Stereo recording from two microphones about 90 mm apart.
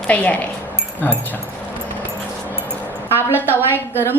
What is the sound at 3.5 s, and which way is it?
Speech, 25° left (ahead or behind).